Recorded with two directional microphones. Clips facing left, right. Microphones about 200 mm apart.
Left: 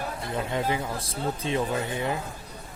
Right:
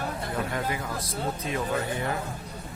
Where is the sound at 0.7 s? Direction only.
25° left (ahead or behind).